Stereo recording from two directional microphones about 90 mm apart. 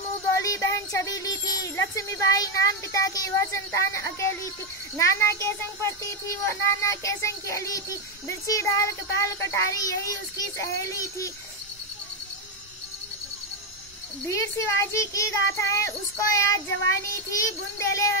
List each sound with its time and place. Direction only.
0.3 s speech: 35° left (ahead or behind)
14.2 s speech: 35° left (ahead or behind)